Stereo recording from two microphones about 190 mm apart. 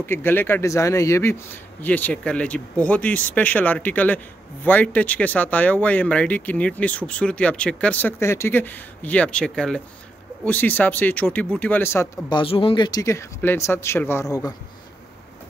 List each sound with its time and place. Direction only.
0.0 s speech: 10° left (ahead or behind)
12.4 s speech: 30° left (ahead or behind)